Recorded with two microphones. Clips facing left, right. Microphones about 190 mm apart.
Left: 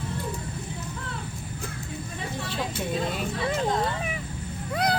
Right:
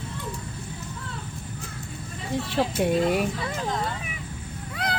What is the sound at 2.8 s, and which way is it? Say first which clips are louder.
Speech: right 7 dB; 75° right (ahead or behind).